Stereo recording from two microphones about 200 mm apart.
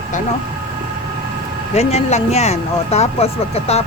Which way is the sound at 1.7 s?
35° left (ahead or behind).